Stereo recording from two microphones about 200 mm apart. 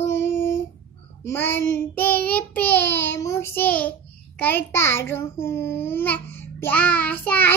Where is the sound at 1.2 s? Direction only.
10° left (ahead or behind).